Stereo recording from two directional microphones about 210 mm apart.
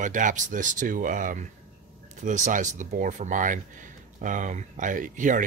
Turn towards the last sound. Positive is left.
turn(degrees=-40)  # may be behind; listen again after turning